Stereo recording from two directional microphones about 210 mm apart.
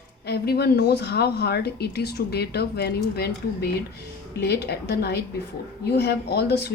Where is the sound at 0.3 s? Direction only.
50° left (ahead or behind).